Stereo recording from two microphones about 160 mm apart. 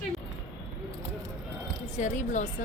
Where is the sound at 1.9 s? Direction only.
50° left (ahead or behind).